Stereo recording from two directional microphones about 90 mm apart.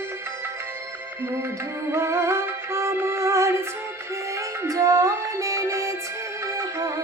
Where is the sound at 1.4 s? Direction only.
30° right (ahead or behind).